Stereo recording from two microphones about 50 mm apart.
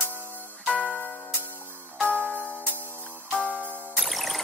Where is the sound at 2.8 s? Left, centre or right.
Right.